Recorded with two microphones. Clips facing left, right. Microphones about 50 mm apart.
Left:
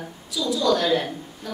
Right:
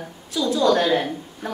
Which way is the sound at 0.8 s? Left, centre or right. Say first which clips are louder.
Right 2 dB; centre.